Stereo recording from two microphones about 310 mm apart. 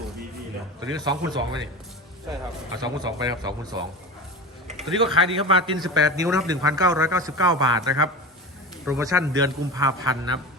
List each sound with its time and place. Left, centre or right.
0.9 s a man's voice: centre
2.8 s a man's voice: centre
4.8 s speech: centre
5.3 s a man's voice: centre
6.2 s speech: centre
6.5 s a man's voice: centre